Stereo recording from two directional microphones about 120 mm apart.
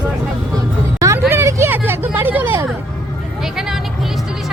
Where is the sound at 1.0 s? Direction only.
25° right (ahead or behind).